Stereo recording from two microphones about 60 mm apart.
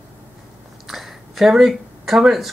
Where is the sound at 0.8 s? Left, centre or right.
Centre.